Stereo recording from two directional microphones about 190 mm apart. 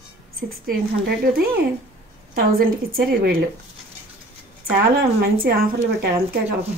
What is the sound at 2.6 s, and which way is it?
Speech, 50° right (ahead or behind).